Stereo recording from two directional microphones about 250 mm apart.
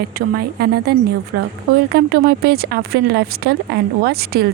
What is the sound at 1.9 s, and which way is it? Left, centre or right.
Speech, right.